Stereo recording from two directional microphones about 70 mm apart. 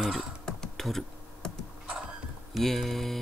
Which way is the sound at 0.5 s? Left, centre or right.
Centre.